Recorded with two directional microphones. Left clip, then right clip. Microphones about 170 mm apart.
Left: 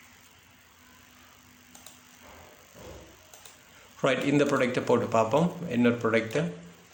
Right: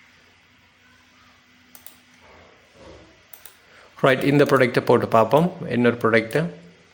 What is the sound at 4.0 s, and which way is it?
Speech, 40° right (ahead or behind).